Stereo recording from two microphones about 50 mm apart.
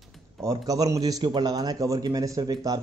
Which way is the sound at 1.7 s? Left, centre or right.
Right.